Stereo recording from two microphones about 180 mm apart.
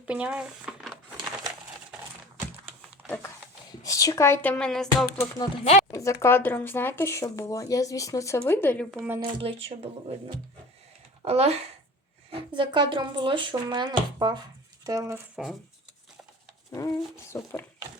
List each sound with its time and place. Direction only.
0.0 s speech: 5° right (ahead or behind)
3.0 s a sound: 10° right (ahead or behind)
3.7 s speech: 20° left (ahead or behind); by 5.0 s centre (ahead or behind)
5.4 s speech: 35° left (ahead or behind)
5.9 s speech: 15° left (ahead or behind); by 9.1 s centre (ahead or behind)
9.2 s speech: 30° right (ahead or behind)
11.3 s speech: 35° right (ahead or behind)
12.5 s speech: 25° right (ahead or behind)
16.7 s speech: 15° left (ahead or behind)